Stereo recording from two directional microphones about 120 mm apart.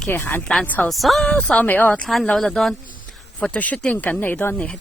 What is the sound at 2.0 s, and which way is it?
Speech, 5° left (ahead or behind).